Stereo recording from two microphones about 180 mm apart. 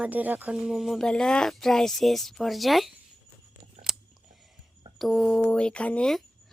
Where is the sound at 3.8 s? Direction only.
35° right (ahead or behind).